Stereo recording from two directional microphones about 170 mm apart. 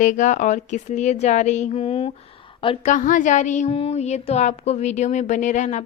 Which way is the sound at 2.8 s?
50° left (ahead or behind).